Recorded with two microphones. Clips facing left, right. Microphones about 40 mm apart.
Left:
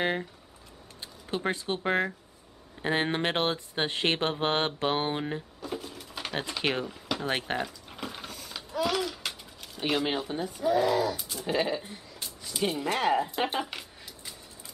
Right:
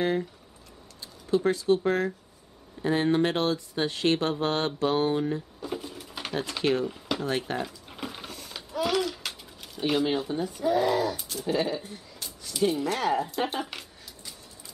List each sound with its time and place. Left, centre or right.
1.0 s speech: left
5.6 s bird: centre
6.6 s speech: left
7.6 s a sound: centre
9.8 s speech: centre
10.7 s speech: centre
11.6 s speech: centre
11.9 s a sound: centre
12.8 s speech: left